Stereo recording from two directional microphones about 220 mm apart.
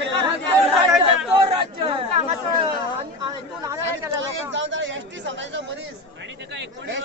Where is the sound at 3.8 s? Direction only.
55° right (ahead or behind).